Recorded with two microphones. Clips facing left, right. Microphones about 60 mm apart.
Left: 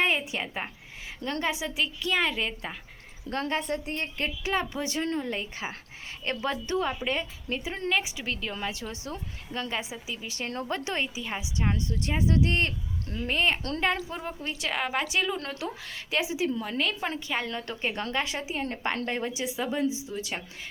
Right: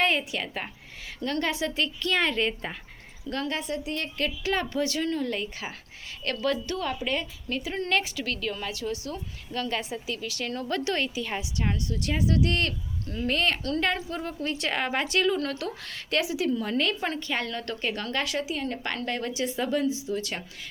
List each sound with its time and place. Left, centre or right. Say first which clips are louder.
0.0 s a woman's voice: right 1 dB; centre
3.2 s a woman's voice: left 1 dB; left
4.5 s a woman's voice: right 1 dB; centre
7.9 s a woman's voice: even; centre
8.1 s a woman's voice: right 3 dB; left
10.2 s a woman's voice: left 2 dB; left
10.7 s a woman's voice: right 4 dB; centre
13.6 s a woman's voice: right 4 dB; left
14.1 s a woman's voice: right 3 dB; centre
14.6 s a woman's voice: even; centre
16.2 s a woman's voice: right 1 dB; left
16.6 s a woman's voice: right 3 dB; centre
19.8 s a woman's voice: right 2 dB; left